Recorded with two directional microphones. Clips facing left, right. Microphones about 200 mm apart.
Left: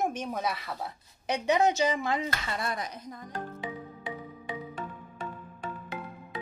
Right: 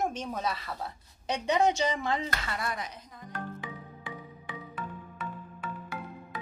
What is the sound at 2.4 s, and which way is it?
Speech, 30° left (ahead or behind).